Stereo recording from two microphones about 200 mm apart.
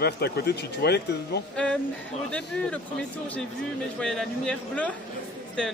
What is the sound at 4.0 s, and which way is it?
Speech, 5° left (ahead or behind).